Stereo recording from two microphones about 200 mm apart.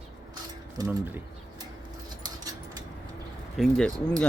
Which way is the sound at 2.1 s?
20° right (ahead or behind).